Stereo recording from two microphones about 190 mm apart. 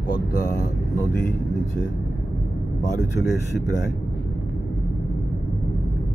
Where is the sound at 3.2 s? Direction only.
60° left (ahead or behind).